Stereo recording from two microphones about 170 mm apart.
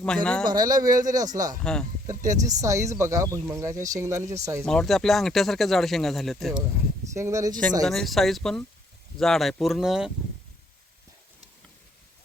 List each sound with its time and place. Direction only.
0.0 s speech: 5° left (ahead or behind)
0.4 s speech: 25° right (ahead or behind)
1.6 s speech: 5° left (ahead or behind)
2.0 s speech: 20° right (ahead or behind)
4.6 s speech: 5° left (ahead or behind)
7.1 s speech: 15° right (ahead or behind)
7.9 s speech: centre (ahead or behind)